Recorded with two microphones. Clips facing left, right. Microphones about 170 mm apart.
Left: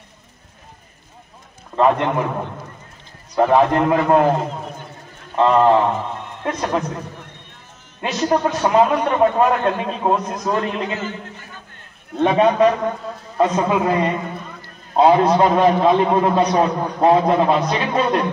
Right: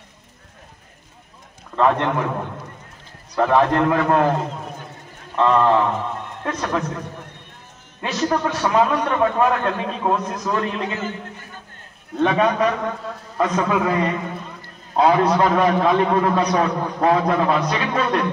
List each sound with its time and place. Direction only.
1.8 s a man's voice: 15° left (ahead or behind)
3.3 s a man's voice: 15° left (ahead or behind)
8.0 s a man's voice: 20° left (ahead or behind)
11.0 s a sound: 50° right (ahead or behind)
12.2 s a man's voice: 30° left (ahead or behind)